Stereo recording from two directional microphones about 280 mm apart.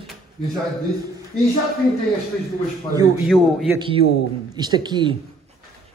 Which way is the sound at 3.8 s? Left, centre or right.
Centre.